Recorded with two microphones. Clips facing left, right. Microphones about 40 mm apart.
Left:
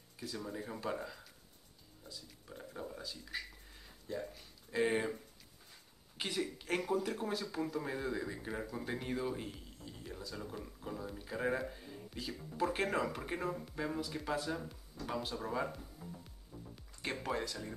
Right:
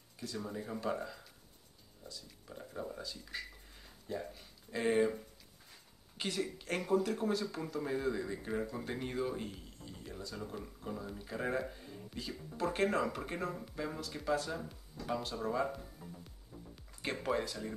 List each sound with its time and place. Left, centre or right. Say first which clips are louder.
0.2 s speech: right 1 dB; centre
6.1 s speech: right 1 dB; centre
17.0 s speech: right 3 dB; centre